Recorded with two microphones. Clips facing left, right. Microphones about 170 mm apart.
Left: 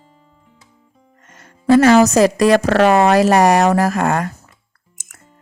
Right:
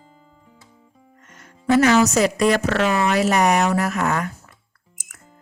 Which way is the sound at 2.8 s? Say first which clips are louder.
Left 9 dB; 60° left (ahead or behind).